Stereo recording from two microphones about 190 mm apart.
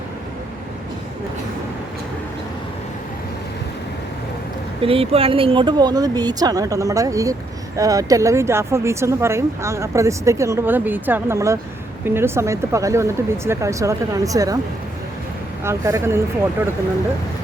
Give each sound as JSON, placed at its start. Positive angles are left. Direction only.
{"t": 4.8, "sound": "speech", "side_deg": -30}
{"t": 15.6, "sound": "speech", "side_deg": -15}